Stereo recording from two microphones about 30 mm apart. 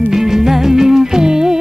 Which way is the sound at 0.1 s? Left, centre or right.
Centre.